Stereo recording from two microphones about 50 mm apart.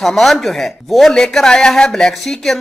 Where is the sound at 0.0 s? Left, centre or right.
Centre.